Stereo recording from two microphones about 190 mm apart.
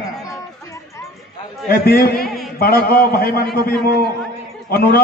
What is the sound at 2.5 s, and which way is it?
A man's voice, 55° left (ahead or behind).